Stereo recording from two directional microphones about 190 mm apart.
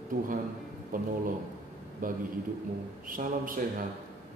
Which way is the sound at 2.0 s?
45° right (ahead or behind).